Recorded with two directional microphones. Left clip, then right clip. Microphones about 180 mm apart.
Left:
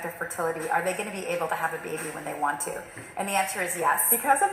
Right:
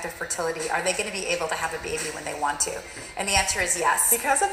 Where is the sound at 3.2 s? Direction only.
15° right (ahead or behind).